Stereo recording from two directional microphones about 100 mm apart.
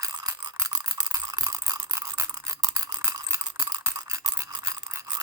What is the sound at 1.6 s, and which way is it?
Toothbrush, 30° right (ahead or behind).